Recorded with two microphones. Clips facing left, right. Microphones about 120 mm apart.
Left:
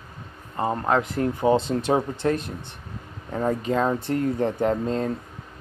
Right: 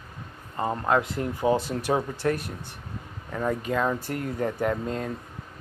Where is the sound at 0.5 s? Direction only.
20° left (ahead or behind).